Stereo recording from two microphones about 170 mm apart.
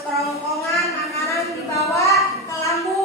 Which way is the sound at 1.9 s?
20° left (ahead or behind).